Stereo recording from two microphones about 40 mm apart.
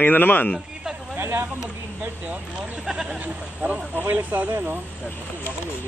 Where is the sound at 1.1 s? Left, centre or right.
Right.